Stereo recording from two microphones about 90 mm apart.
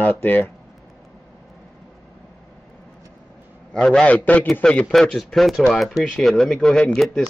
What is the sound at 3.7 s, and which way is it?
A man's voice, 10° left (ahead or behind).